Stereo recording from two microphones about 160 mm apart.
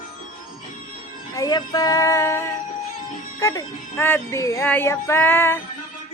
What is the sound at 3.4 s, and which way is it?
Speech, 15° left (ahead or behind).